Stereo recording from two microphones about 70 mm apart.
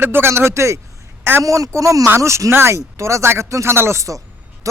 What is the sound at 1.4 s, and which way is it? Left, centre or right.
A woman's voice, right.